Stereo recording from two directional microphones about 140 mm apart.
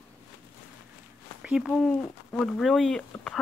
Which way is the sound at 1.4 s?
5° right (ahead or behind).